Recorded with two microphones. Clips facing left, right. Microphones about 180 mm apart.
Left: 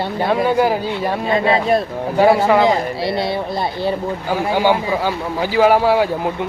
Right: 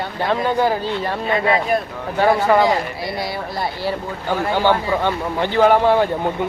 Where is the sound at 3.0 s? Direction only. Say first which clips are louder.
Left 5 dB; 25° left (ahead or behind).